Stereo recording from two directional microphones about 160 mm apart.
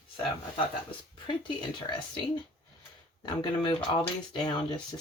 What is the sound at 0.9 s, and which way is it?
Speech, 30° left (ahead or behind).